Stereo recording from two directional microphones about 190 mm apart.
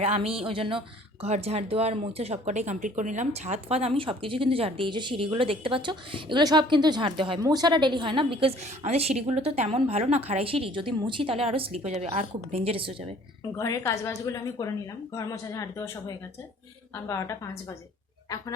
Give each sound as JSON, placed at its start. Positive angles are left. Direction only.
{"t": 0.0, "sound": "speech", "side_deg": -30}
{"t": 13.6, "sound": "speech", "side_deg": 15}